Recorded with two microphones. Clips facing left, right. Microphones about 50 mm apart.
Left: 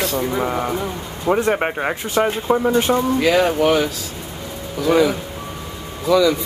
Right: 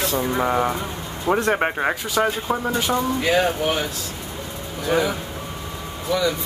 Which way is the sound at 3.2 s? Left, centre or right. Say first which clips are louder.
Left 5 dB; left.